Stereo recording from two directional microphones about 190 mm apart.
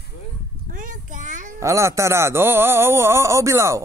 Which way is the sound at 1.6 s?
15° right (ahead or behind).